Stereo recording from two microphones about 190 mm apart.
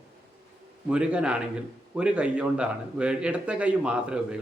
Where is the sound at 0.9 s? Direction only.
5° right (ahead or behind).